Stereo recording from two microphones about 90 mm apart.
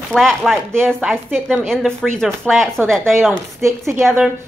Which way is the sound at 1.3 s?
15° right (ahead or behind).